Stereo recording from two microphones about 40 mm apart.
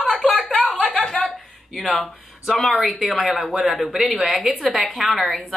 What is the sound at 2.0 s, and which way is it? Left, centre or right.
Speech, centre.